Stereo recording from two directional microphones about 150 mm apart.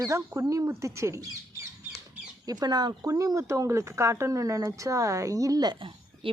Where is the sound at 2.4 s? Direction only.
25° right (ahead or behind).